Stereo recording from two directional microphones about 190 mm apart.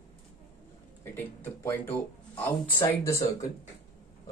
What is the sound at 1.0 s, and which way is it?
Speech, 10° left (ahead or behind).